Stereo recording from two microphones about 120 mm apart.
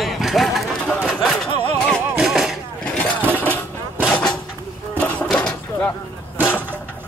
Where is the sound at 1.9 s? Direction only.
5° right (ahead or behind).